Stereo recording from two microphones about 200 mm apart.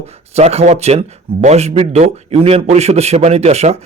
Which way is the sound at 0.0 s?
30° right (ahead or behind).